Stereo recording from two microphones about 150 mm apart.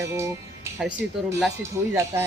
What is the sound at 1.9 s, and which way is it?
Speech, 20° right (ahead or behind).